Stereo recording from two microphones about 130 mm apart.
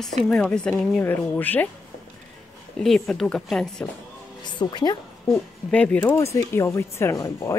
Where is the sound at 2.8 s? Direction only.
5° left (ahead or behind).